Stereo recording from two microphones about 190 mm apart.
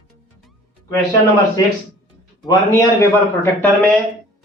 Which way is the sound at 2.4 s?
15° left (ahead or behind).